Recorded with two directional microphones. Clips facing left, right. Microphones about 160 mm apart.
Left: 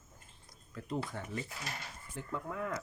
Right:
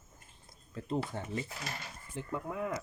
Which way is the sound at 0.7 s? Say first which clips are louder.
Right 3 dB; 25° right (ahead or behind).